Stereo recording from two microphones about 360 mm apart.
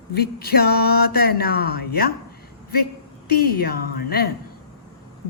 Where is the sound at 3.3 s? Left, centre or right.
Left.